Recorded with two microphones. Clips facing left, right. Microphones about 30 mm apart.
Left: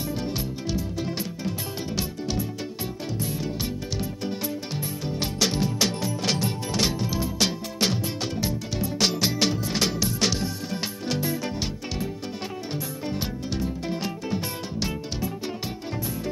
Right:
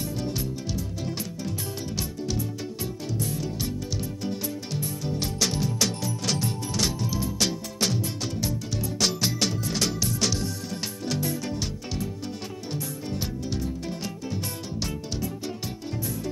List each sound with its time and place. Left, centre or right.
0.1 s music: centre
3.2 s music: left